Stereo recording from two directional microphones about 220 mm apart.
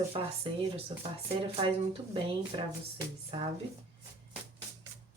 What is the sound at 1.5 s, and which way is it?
Speech, 25° right (ahead or behind).